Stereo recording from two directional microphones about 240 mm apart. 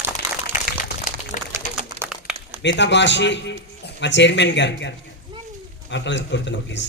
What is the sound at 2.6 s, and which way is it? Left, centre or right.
A man's voice, left.